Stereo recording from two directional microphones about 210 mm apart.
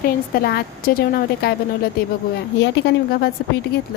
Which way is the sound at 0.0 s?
45° left (ahead or behind).